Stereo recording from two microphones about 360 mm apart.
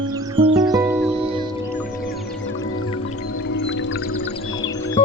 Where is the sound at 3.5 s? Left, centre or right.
Left.